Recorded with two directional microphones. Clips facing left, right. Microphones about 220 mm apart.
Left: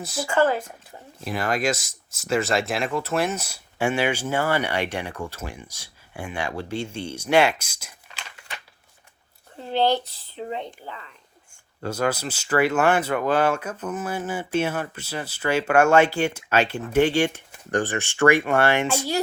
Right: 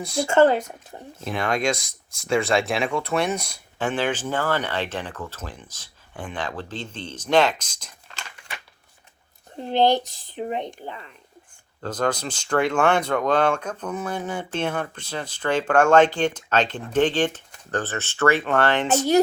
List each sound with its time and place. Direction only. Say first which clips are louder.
0.0 s speech: right 5 dB; 5° left (ahead or behind)
0.3 s speech: right 4 dB; 20° right (ahead or behind)
1.2 s speech: right 1 dB; centre (ahead or behind)
9.6 s speech: right 2 dB; 15° right (ahead or behind)
11.8 s speech: even; 10° left (ahead or behind)